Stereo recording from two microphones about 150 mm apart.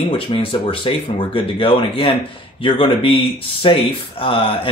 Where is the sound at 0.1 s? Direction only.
35° left (ahead or behind).